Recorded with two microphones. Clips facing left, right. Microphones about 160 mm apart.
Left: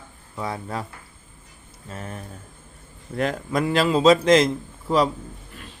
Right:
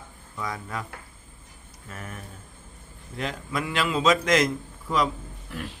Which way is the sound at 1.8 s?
30° left (ahead or behind).